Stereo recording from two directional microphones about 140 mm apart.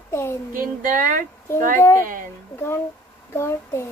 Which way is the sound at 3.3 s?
20° left (ahead or behind).